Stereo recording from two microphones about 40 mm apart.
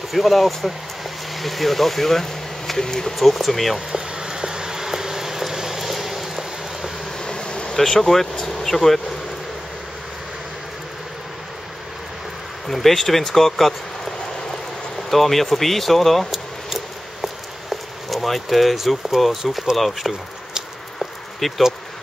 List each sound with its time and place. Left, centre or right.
0.1 s speech: centre
3.2 s speech: centre
3.9 s a sound: centre
7.2 s bee: left
7.7 s speech: centre
12.6 s speech: centre
15.0 s speech: centre
16.7 s a sound: centre
19.8 s speech: centre
21.0 s a sound: centre